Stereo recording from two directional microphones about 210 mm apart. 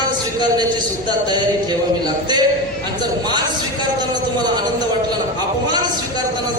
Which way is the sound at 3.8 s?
20° right (ahead or behind).